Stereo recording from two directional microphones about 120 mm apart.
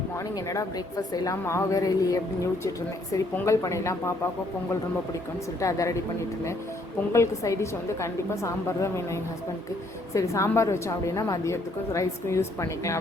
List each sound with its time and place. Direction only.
0.3 s a woman's voice: 25° left (ahead or behind)
3.3 s a woman's voice: 25° left (ahead or behind)
5.5 s a woman's voice: 25° left (ahead or behind)
7.1 s a woman's voice: 25° left (ahead or behind)